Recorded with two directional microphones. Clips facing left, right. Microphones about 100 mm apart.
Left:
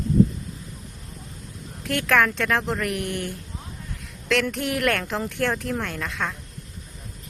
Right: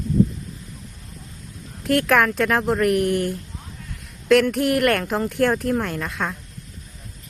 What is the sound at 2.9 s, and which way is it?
Speech, 90° right.